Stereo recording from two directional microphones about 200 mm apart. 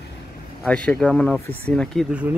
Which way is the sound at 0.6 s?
5° left (ahead or behind).